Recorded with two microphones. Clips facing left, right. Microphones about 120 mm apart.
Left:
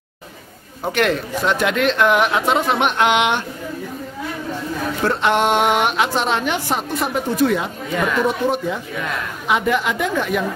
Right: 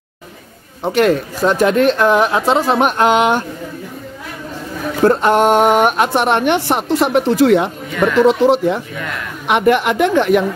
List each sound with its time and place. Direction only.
0.8 s speech: 35° right (ahead or behind)
5.0 s a woman's voice: 40° right (ahead or behind); by 7.7 s 70° right (ahead or behind)
8.3 s speech: 80° right
9.5 s a woman's voice: 65° right (ahead or behind)